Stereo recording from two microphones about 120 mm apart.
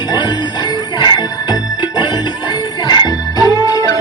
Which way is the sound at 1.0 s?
35° left (ahead or behind).